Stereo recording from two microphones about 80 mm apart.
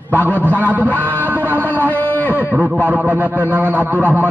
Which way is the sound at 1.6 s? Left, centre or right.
Left.